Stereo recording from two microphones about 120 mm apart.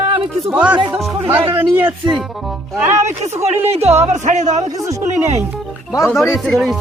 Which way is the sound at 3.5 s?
60° right (ahead or behind).